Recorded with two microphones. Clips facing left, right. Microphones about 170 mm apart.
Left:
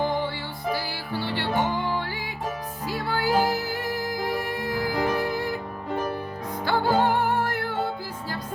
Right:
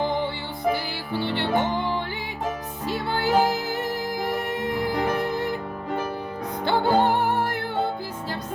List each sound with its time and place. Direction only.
0.0 s music: 20° right (ahead or behind)
2.8 s music: 25° right (ahead or behind)
6.7 s music: 20° right (ahead or behind)